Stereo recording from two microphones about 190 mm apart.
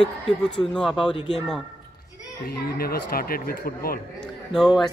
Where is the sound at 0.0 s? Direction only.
5° left (ahead or behind).